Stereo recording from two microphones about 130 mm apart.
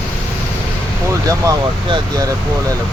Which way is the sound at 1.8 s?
40° right (ahead or behind).